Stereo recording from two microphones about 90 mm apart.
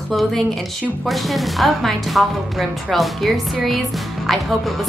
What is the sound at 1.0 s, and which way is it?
Speech, centre (ahead or behind).